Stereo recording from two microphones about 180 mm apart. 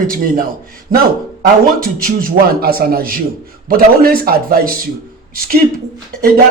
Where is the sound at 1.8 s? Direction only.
55° right (ahead or behind).